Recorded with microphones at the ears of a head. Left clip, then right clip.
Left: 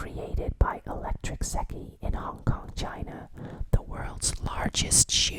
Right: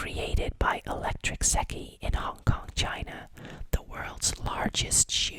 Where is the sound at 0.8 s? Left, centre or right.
Right.